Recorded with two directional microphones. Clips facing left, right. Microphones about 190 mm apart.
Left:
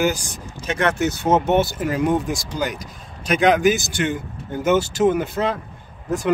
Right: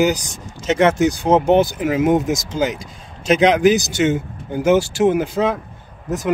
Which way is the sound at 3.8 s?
20° right (ahead or behind).